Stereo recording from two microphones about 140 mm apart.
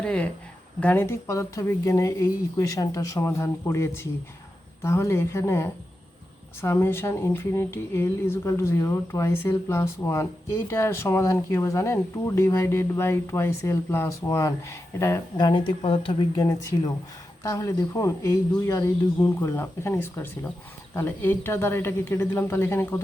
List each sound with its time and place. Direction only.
0.0 s a woman's voice: 10° left (ahead or behind)
15.4 s speech: 35° left (ahead or behind)
16.3 s a woman's voice: 25° left (ahead or behind)